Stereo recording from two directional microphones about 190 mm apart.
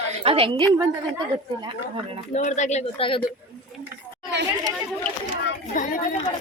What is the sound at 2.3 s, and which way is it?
Speech, 40° left (ahead or behind).